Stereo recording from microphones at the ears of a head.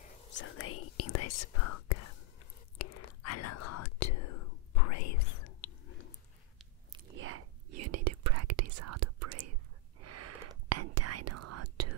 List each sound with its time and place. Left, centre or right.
0.0 s speech: left
2.8 s whispering: left
6.6 s whispering: right